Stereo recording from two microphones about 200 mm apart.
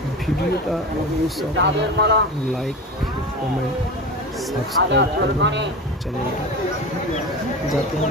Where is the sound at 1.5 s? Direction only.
60° right (ahead or behind).